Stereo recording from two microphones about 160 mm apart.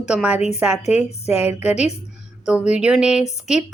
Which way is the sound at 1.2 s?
40° left (ahead or behind).